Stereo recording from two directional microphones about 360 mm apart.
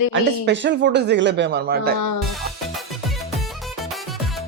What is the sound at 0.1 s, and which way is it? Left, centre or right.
Speech, right.